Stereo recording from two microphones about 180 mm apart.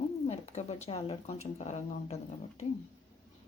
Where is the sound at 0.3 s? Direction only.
40° left (ahead or behind).